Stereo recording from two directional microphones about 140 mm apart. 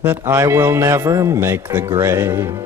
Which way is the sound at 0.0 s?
15° right (ahead or behind).